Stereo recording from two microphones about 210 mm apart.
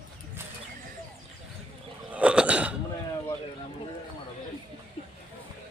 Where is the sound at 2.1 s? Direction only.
5° right (ahead or behind).